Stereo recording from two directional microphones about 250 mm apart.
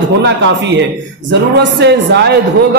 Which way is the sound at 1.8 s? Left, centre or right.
Right.